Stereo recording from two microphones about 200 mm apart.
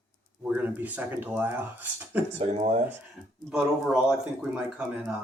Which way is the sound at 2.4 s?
30° right (ahead or behind).